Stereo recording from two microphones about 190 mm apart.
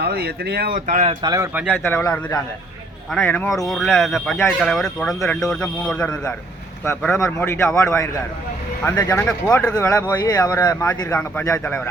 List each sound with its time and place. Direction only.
0.0 s speech: 55° right (ahead or behind); by 1.1 s 40° right (ahead or behind)
1.2 s speech: 20° right (ahead or behind)
1.5 s speech: 5° right (ahead or behind)
1.8 s speech: 10° left (ahead or behind)